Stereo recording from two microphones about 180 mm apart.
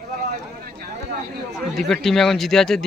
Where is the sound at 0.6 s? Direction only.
50° right (ahead or behind).